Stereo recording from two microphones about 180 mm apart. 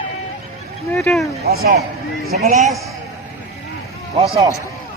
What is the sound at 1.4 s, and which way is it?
Speech, 60° right (ahead or behind).